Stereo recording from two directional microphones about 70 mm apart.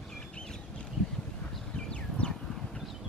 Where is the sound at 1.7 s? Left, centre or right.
Centre.